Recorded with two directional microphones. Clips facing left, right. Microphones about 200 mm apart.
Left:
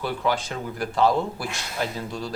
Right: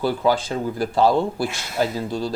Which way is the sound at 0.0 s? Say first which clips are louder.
Right 6 dB; 35° right (ahead or behind).